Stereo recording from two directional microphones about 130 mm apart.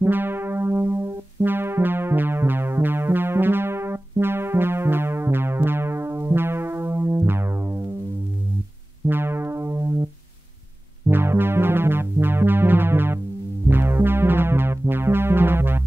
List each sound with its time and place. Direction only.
0.0 s music: 15° right (ahead or behind)
9.0 s music: 20° right (ahead or behind)
11.1 s music: 15° right (ahead or behind)